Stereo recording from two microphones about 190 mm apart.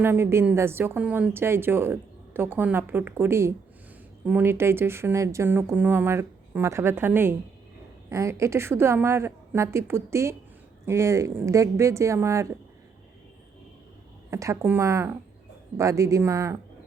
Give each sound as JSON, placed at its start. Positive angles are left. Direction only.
{"t": 0.0, "sound": "a woman's voice", "side_deg": -10}
{"t": 14.3, "sound": "a woman's voice", "side_deg": -15}